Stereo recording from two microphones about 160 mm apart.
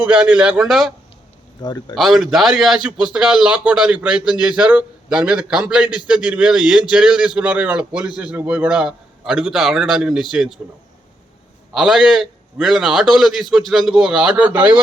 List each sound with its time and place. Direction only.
0.0 s a man's voice: 5° right (ahead or behind)
1.6 s speech: 25° left (ahead or behind)
2.0 s a man's voice: centre (ahead or behind)
11.7 s a man's voice: 5° right (ahead or behind)